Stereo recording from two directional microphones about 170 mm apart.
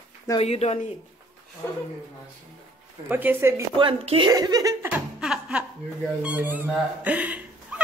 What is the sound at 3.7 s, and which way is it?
Speech, 30° right (ahead or behind).